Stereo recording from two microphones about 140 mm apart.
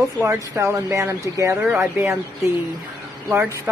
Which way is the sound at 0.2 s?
20° right (ahead or behind).